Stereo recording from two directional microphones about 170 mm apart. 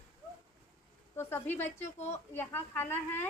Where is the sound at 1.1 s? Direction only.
15° left (ahead or behind).